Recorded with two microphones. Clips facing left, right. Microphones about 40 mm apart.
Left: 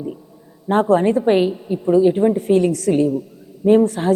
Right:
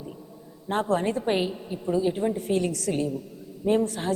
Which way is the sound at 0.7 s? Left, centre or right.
Left.